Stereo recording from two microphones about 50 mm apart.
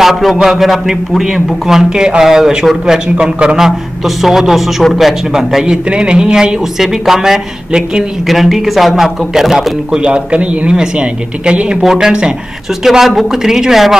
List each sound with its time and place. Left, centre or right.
0.0 s a man's voice: centre
3.2 s a man's voice: centre
3.6 s a man's voice: centre
5.9 s a man's voice: centre
8.3 s speech: centre
9.9 s speech: right
11.8 s a man's voice: centre
12.8 s a man's voice: centre